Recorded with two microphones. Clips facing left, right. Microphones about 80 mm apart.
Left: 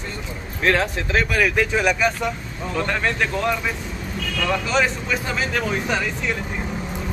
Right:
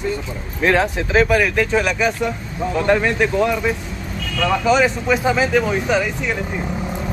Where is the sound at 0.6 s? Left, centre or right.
Centre.